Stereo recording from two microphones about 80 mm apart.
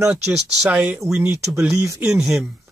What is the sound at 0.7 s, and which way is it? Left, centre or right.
Speech, centre.